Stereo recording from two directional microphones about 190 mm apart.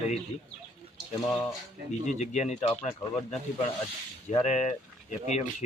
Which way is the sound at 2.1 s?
35° left (ahead or behind).